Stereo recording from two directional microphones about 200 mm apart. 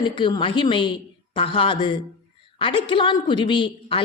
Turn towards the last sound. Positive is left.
turn(degrees=25)  # may be behind; listen again after turning